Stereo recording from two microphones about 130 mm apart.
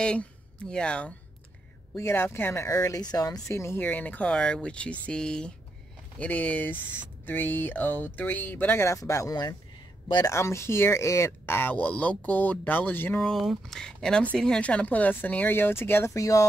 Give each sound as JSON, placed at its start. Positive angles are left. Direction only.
{"t": 0.0, "sound": "speech", "side_deg": 10}
{"t": 2.0, "sound": "speech", "side_deg": 20}
{"t": 10.3, "sound": "speech", "side_deg": 20}
{"t": 13.3, "sound": "speech", "side_deg": 0}